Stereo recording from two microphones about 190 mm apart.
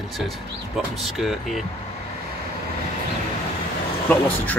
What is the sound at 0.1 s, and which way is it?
Speech, centre (ahead or behind).